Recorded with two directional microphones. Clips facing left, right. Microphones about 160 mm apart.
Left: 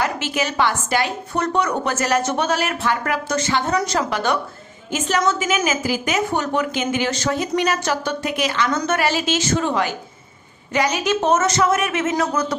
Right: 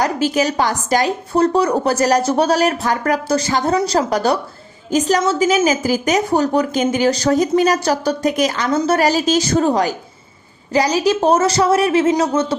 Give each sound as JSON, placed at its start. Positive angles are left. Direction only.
{"t": 0.0, "sound": "a woman's voice", "side_deg": -40}
{"t": 8.7, "sound": "a woman's voice", "side_deg": -25}
{"t": 9.0, "sound": "a woman's voice", "side_deg": -40}